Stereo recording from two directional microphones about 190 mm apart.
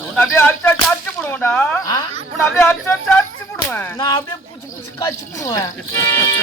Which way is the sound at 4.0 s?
20° left (ahead or behind).